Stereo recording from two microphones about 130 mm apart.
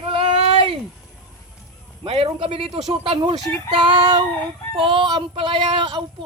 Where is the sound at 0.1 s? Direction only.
45° right (ahead or behind).